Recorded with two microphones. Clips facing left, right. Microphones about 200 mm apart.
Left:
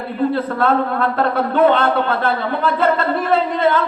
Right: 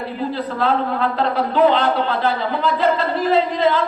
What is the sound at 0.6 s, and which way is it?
Speech, 50° left (ahead or behind).